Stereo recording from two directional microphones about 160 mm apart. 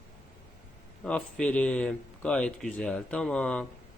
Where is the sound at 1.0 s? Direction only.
5° left (ahead or behind).